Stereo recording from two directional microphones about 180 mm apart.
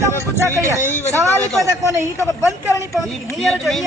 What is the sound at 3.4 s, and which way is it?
Speech, centre (ahead or behind).